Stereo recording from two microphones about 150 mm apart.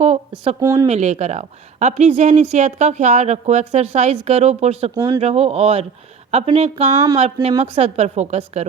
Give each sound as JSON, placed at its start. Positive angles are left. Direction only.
{"t": 0.0, "sound": "a sound", "side_deg": -45}
{"t": 0.6, "sound": "speech", "side_deg": -20}
{"t": 0.9, "sound": "a woman's voice", "side_deg": -50}
{"t": 4.9, "sound": "speech", "side_deg": -25}
{"t": 5.2, "sound": "a woman's voice", "side_deg": -45}
{"t": 6.9, "sound": "speech", "side_deg": -25}
{"t": 7.6, "sound": "a woman's voice", "side_deg": -45}